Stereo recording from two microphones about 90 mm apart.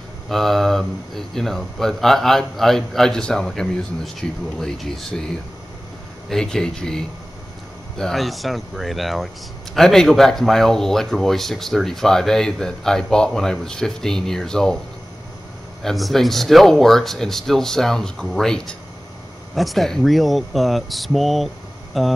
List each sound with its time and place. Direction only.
0.3 s speech: 5° left (ahead or behind)
6.2 s speech: 5° left (ahead or behind)
15.8 s speech: centre (ahead or behind)